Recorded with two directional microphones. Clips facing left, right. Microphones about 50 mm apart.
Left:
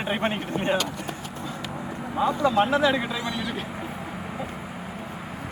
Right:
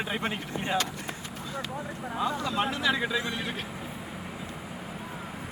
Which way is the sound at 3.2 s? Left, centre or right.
Right.